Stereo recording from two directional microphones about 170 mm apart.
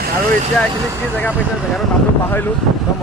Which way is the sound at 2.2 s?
10° left (ahead or behind).